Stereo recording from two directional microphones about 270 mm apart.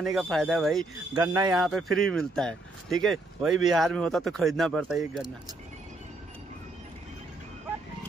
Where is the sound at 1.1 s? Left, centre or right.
Centre.